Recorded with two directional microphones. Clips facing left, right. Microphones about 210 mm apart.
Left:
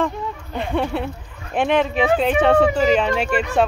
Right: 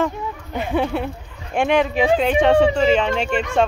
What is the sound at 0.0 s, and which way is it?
Speech, 5° right (ahead or behind).